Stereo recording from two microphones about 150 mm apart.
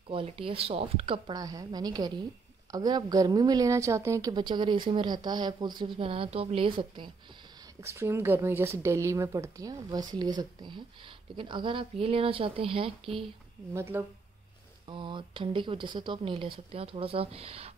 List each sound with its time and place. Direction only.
0.1 s a woman's voice: 35° right (ahead or behind)
7.8 s a woman's voice: 20° right (ahead or behind); by 13.2 s 35° right (ahead or behind)
13.7 s speech: 15° right (ahead or behind)
14.9 s a woman's voice: 35° right (ahead or behind)